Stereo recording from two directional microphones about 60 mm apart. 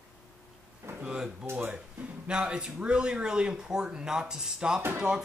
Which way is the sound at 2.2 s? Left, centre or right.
Centre.